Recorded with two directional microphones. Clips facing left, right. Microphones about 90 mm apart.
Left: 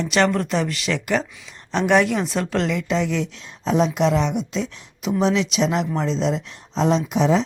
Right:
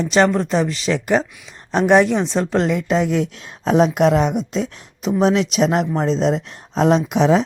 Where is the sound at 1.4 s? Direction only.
40° right (ahead or behind).